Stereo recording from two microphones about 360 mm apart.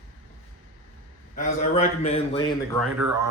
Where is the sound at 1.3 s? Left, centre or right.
Left.